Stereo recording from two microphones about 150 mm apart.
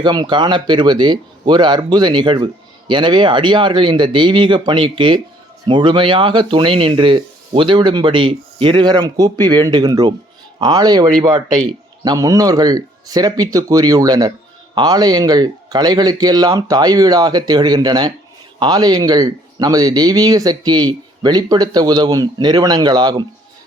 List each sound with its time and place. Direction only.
0.0 s speech: 30° right (ahead or behind)